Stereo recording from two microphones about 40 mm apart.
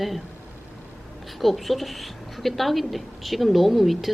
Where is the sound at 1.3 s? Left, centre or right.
Centre.